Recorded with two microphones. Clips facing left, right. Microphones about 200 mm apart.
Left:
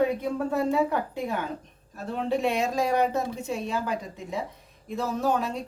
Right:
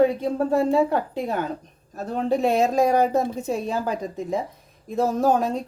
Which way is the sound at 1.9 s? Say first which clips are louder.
Right 4 dB; 40° right (ahead or behind).